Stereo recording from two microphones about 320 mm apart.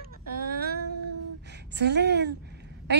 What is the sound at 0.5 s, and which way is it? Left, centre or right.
Female singing, right.